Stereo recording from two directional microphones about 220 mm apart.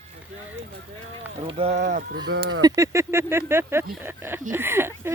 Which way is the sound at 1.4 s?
30° right (ahead or behind).